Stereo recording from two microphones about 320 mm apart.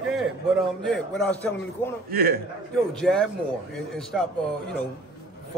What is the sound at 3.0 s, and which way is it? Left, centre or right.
Speech, centre.